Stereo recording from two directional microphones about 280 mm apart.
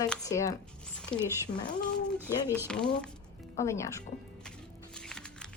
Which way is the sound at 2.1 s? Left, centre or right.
Centre.